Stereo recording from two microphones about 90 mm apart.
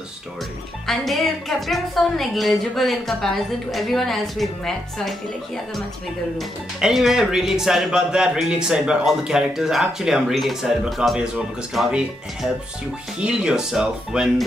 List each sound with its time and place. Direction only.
0.8 s speech: centre (ahead or behind)
6.3 s speech: centre (ahead or behind)